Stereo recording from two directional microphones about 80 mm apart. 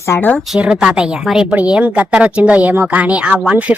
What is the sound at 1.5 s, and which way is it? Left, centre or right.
A woman's voice, centre.